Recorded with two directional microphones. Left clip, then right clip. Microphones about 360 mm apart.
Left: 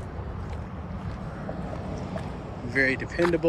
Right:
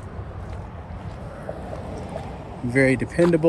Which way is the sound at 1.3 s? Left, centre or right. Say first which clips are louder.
Right 3 dB; right.